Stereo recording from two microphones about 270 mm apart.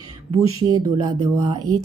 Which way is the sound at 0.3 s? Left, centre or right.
Centre.